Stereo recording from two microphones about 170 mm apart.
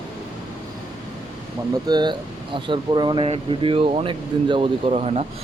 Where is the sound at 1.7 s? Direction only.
25° right (ahead or behind).